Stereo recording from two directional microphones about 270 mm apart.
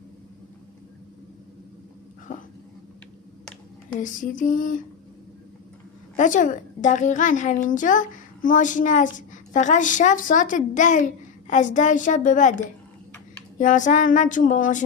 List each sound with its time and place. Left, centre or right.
2.3 s dog: left
4.0 s a woman's voice: left
6.1 s a woman's voice: left
13.6 s a woman's voice: left